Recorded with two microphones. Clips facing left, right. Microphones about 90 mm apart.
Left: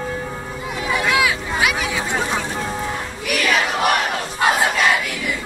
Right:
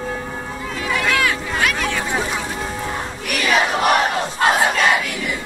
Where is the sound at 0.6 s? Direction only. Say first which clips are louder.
Left 1 dB; 20° left (ahead or behind).